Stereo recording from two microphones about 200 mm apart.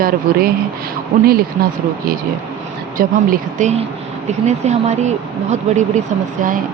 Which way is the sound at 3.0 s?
40° right (ahead or behind).